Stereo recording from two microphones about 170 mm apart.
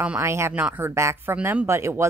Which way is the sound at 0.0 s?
10° right (ahead or behind).